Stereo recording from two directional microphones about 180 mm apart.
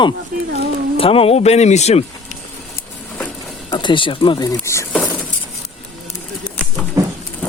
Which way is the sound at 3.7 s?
25° left (ahead or behind).